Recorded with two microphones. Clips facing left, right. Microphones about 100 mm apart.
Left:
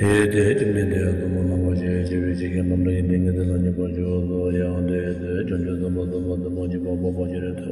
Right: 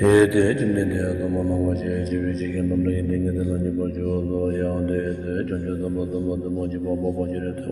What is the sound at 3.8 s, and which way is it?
Mantra, 10° right (ahead or behind).